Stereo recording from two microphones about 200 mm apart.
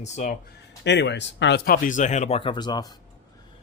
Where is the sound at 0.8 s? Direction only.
60° left (ahead or behind).